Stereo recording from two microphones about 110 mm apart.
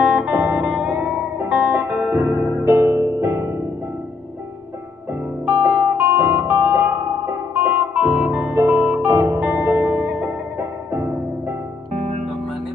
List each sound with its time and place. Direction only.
0.0 s music: 10° right (ahead or behind); by 3.5 s 25° right (ahead or behind)
5.5 s music: 15° right (ahead or behind)
8.0 s guitar: 10° right (ahead or behind)
8.5 s music: 25° right (ahead or behind)
11.9 s music: 90° right